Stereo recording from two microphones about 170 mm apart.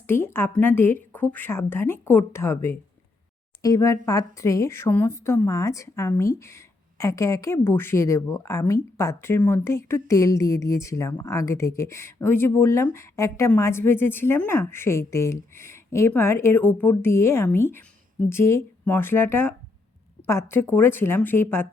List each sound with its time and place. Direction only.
0.1 s a woman's voice: 15° left (ahead or behind)